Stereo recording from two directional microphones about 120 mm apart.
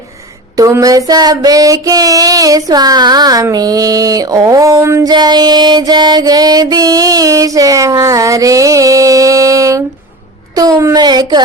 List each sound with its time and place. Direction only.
0.5 s child singing: 30° right (ahead or behind)
5.1 s music: 35° right (ahead or behind)
10.9 s child singing: 35° right (ahead or behind)